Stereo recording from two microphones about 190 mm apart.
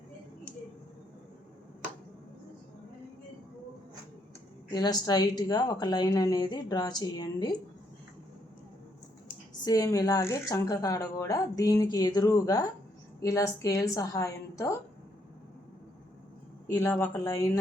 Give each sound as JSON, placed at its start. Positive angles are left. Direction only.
{"t": 4.7, "sound": "speech", "side_deg": 20}
{"t": 9.6, "sound": "a woman's voice", "side_deg": 20}
{"t": 16.6, "sound": "a woman's voice", "side_deg": 15}